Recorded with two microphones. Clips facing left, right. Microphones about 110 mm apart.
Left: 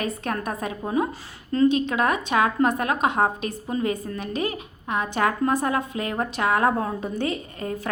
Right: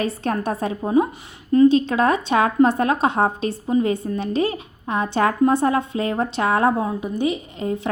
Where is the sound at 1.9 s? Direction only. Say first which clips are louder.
Right 4 dB; 30° right (ahead or behind).